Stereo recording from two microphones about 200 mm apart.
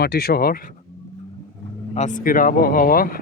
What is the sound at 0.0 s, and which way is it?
Speech, 50° left (ahead or behind).